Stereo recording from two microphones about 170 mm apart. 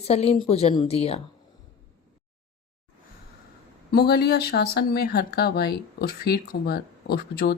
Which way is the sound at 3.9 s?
70° left (ahead or behind).